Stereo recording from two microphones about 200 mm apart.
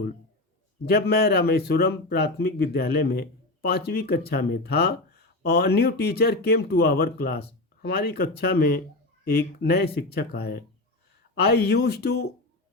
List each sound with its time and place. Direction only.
0.9 s speech: 50° left (ahead or behind)